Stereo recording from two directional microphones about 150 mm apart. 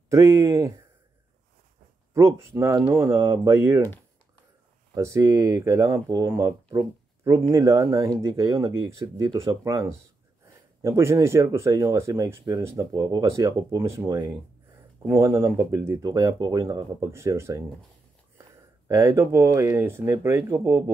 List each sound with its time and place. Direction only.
0.1 s speech: 20° right (ahead or behind)
2.1 s speech: 20° right (ahead or behind)
4.9 s speech: 20° right (ahead or behind)
10.8 s speech: 15° right (ahead or behind)
18.9 s speech: 20° right (ahead or behind)